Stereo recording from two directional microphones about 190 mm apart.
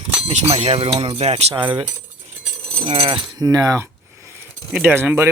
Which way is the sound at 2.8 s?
30° right (ahead or behind).